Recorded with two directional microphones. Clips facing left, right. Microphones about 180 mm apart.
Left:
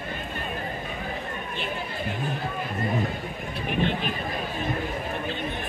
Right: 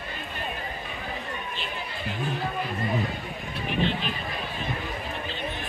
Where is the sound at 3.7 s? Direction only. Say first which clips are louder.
Left 1 dB; 55° left (ahead or behind).